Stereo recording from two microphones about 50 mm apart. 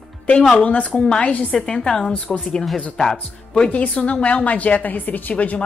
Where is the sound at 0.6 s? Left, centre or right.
Left; by 3.2 s centre.